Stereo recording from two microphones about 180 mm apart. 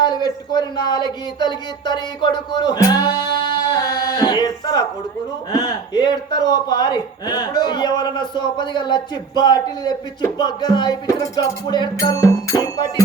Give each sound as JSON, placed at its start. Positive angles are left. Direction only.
{"t": 0.0, "sound": "speech", "side_deg": 25}